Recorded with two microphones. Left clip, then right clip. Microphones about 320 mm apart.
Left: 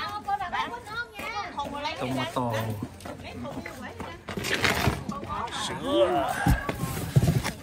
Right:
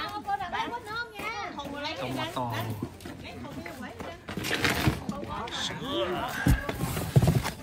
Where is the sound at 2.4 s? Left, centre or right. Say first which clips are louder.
Left 4 dB; left.